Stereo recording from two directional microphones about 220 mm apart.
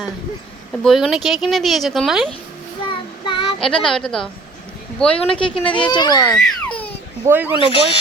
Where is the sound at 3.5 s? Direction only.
Centre (ahead or behind).